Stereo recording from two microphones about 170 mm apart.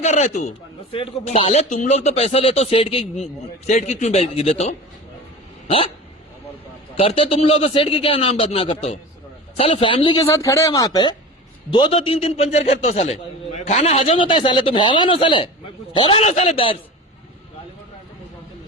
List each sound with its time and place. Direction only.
0.0 s a man's voice: 45° left (ahead or behind)
6.9 s a man's voice: 35° left (ahead or behind)
10.2 s a man's voice: 20° left (ahead or behind); by 16.7 s 35° left (ahead or behind)